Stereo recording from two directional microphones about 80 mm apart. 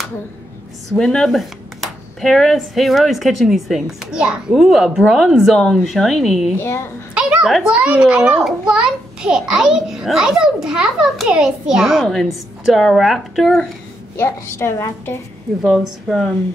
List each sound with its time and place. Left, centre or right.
0.9 s speech: centre
6.6 s a woman's voice: left
7.2 s a sound: centre
7.7 s a child's voice: centre
14.1 s a woman's voice: left
15.6 s speech: centre